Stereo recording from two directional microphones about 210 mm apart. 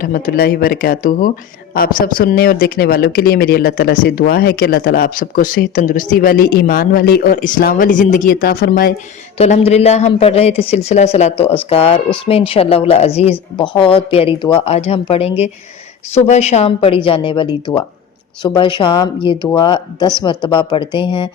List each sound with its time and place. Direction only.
0.0 s speech: 45° left (ahead or behind)
9.4 s a woman's voice: 30° left (ahead or behind)